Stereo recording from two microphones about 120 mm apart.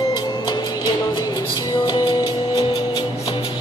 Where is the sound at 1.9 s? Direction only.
35° left (ahead or behind).